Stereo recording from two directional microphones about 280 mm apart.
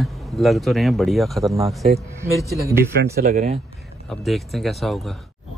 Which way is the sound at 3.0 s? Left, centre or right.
Right.